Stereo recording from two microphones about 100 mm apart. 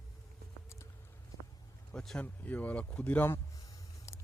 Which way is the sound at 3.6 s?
35° left (ahead or behind).